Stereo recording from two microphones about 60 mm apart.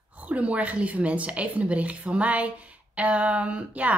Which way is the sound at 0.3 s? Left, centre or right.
Right.